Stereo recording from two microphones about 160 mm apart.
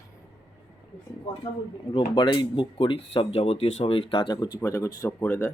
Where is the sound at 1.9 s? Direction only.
30° left (ahead or behind); by 5.5 s 15° left (ahead or behind).